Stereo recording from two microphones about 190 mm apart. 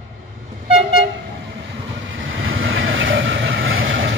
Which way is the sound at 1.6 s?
80° right.